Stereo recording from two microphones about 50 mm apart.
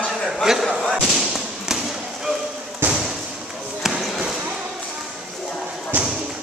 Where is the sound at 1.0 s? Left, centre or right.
Centre.